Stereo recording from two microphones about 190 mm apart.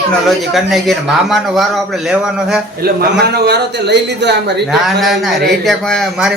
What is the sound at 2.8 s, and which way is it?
A man's voice, 55° right (ahead or behind).